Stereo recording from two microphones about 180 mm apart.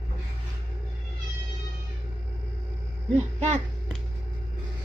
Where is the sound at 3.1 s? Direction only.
40° right (ahead or behind).